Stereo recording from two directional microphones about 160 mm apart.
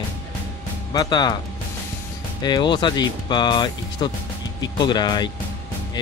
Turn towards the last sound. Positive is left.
turn(degrees=25)  # may be behind; listen again after turning